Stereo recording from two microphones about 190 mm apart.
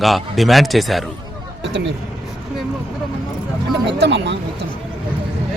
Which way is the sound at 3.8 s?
65° right (ahead or behind).